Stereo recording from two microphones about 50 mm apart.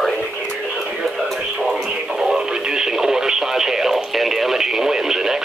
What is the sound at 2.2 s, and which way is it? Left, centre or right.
Radio, centre.